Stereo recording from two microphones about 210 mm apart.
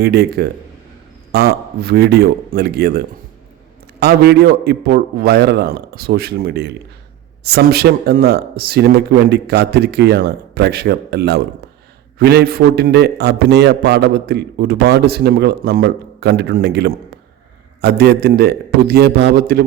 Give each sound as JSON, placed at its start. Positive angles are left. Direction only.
{"t": 0.0, "sound": "a man's voice", "side_deg": -50}
{"t": 4.0, "sound": "a man's voice", "side_deg": -50}